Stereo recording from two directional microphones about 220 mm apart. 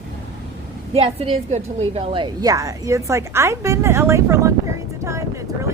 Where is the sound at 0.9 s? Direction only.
25° right (ahead or behind).